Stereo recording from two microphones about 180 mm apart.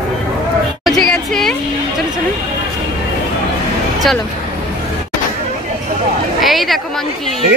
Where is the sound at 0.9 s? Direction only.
Centre (ahead or behind).